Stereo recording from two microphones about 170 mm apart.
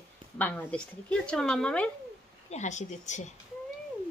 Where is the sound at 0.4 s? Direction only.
10° left (ahead or behind).